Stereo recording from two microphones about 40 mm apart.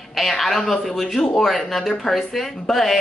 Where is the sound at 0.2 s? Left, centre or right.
Centre.